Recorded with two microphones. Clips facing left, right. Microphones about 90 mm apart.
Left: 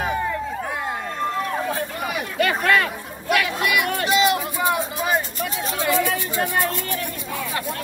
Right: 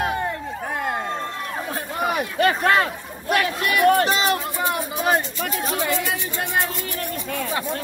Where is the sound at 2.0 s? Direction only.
40° right (ahead or behind).